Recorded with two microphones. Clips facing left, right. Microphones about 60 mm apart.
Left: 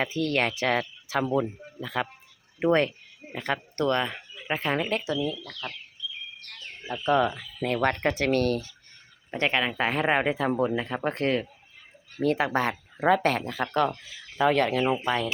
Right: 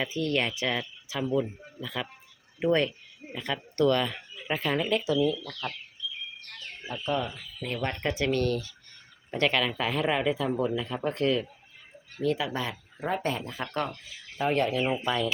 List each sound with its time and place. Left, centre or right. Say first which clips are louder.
0.0 s speech: left 2 dB; left
1.8 s speech: left 5 dB; left
7.0 s speech: left 7 dB; left
9.3 s speech: even; left
13.0 s speech: left 7 dB; left
15.0 s speech: left 1 dB; left